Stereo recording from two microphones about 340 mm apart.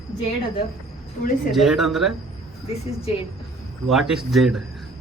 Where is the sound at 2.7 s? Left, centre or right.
Centre.